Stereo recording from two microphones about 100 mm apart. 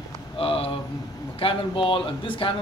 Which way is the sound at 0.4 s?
65° left (ahead or behind).